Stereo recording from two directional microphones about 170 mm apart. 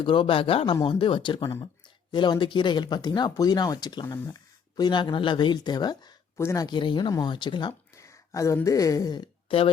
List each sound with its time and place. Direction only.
0.0 s speech: 30° left (ahead or behind)